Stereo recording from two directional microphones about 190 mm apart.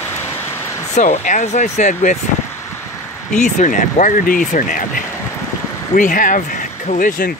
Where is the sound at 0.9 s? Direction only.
40° left (ahead or behind).